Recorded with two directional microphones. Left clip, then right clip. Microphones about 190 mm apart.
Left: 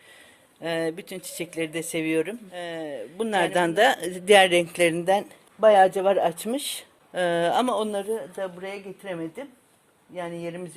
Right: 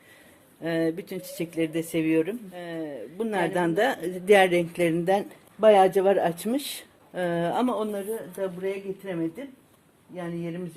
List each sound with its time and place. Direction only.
0.6 s speech: 35° left (ahead or behind)
7.1 s a woman's voice: 45° left (ahead or behind)